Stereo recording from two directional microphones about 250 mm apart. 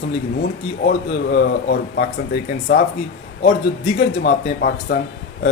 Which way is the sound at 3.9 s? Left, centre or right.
Left.